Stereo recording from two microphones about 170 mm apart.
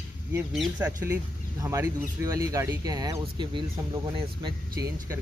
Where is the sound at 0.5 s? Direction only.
5° right (ahead or behind).